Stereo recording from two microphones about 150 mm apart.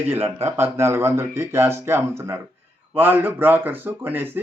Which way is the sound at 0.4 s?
20° right (ahead or behind).